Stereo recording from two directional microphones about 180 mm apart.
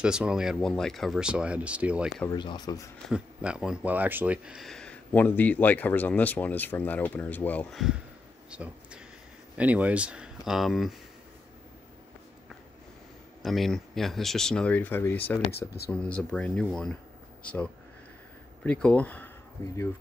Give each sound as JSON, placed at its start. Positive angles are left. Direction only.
{"t": 0.0, "sound": "speech", "side_deg": -5}
{"t": 2.2, "sound": "speech", "side_deg": 25}
{"t": 3.1, "sound": "speech", "side_deg": -5}
{"t": 8.5, "sound": "a sound", "side_deg": -5}
{"t": 9.6, "sound": "speech", "side_deg": -10}
{"t": 13.4, "sound": "speech", "side_deg": 0}